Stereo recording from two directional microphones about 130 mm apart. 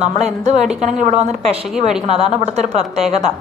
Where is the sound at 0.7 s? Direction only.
65° right (ahead or behind).